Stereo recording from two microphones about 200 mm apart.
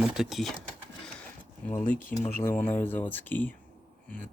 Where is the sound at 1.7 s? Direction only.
40° left (ahead or behind).